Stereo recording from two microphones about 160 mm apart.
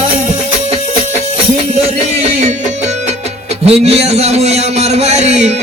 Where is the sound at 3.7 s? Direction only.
40° right (ahead or behind).